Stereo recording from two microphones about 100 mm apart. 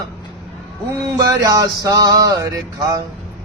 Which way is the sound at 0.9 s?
35° right (ahead or behind).